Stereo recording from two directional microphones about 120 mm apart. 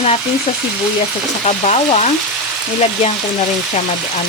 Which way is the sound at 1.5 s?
70° left (ahead or behind).